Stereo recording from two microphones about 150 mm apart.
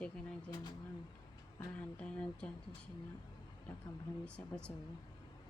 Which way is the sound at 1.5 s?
10° left (ahead or behind).